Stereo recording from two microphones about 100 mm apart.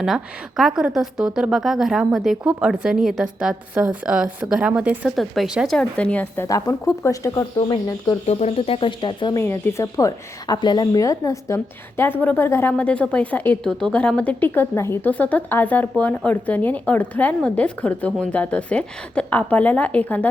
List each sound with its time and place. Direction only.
0.0 s a woman's voice: 5° right (ahead or behind)
5.1 s a woman's voice: centre (ahead or behind)
5.8 s speech: 15° left (ahead or behind)
6.4 s a woman's voice: 30° left (ahead or behind)
8.3 s speech: 90° left; by 9.3 s 50° left (ahead or behind)
9.3 s a woman's voice: 20° left (ahead or behind)
10.5 s a woman's voice: 45° left (ahead or behind); by 12.7 s 25° left (ahead or behind)
12.7 s speech: 15° left (ahead or behind)